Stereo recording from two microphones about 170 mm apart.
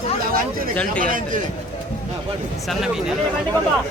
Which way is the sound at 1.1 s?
50° right (ahead or behind).